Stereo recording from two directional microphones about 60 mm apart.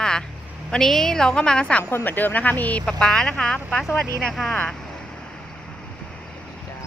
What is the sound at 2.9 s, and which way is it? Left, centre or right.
Speech, centre.